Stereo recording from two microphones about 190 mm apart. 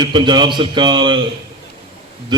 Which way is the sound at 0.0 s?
25° right (ahead or behind).